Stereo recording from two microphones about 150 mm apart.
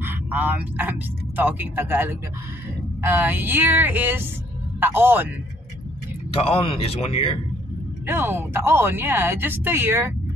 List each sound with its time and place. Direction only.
0.0 s speech: 10° right (ahead or behind)
6.3 s speech: 40° left (ahead or behind)
8.1 s speech: 15° right (ahead or behind)